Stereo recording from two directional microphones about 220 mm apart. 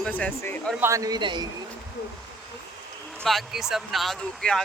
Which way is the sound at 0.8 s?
15° right (ahead or behind).